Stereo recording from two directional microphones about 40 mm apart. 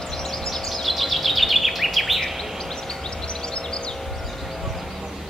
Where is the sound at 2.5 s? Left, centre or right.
Centre.